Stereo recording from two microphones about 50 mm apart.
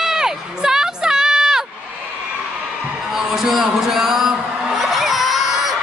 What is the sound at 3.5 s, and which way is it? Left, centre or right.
Music, centre.